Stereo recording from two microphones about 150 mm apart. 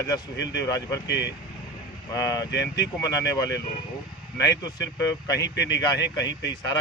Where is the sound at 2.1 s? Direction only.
20° left (ahead or behind).